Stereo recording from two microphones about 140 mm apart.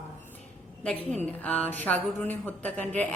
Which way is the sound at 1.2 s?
10° left (ahead or behind).